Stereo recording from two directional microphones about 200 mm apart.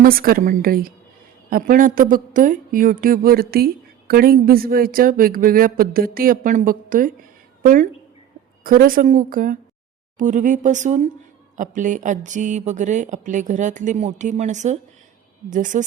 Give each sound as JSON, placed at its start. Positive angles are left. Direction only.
{"t": 0.0, "sound": "a woman's voice", "side_deg": -45}